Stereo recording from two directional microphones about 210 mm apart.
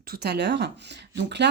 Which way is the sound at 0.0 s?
50° right (ahead or behind).